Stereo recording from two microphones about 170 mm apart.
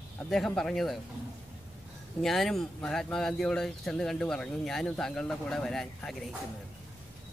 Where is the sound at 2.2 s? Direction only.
Centre (ahead or behind).